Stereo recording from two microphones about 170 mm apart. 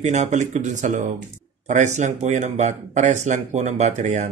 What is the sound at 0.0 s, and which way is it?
Speech, 40° right (ahead or behind).